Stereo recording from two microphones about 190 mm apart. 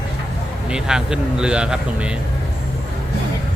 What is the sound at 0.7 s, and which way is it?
Speech, 5° right (ahead or behind).